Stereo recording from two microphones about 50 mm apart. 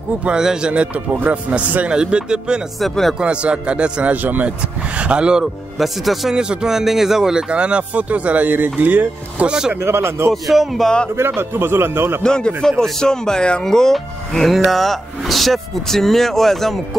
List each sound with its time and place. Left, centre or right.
0.2 s speech: centre
2.8 s speech: centre
3.2 s speech: right
5.4 s speech: centre
6.3 s speech: centre; by 9.5 s right
9.5 s speech: centre
9.8 s speech: right
10.3 s speech: centre
11.1 s a man's voice: right
12.2 s speech: centre